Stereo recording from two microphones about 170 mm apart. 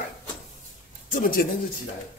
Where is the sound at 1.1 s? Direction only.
55° left (ahead or behind).